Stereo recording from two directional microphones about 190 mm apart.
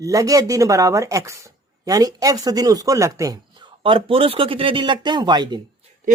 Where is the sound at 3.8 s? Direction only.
30° right (ahead or behind).